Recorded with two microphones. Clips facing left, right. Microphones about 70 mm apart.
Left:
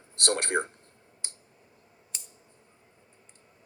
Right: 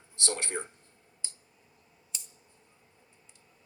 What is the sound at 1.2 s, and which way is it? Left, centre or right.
Clicking, left.